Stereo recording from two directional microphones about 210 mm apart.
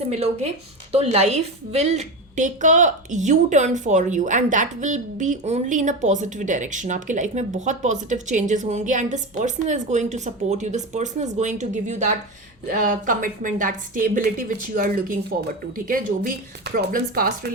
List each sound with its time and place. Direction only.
0.1 s a woman's voice: 30° right (ahead or behind)